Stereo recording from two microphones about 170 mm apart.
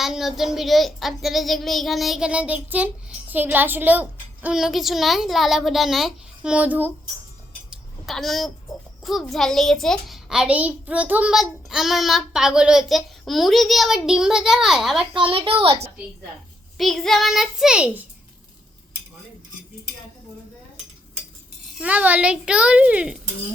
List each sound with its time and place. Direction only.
0.0 s child singing: centre (ahead or behind)
7.7 s a sound: centre (ahead or behind)
9.0 s child singing: centre (ahead or behind)
15.2 s a woman's voice: 30° right (ahead or behind)
16.7 s child singing: centre (ahead or behind)
21.8 s a child's voice: 10° right (ahead or behind)